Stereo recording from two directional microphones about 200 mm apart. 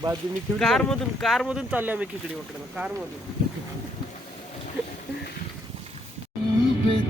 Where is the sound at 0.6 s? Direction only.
Centre (ahead or behind).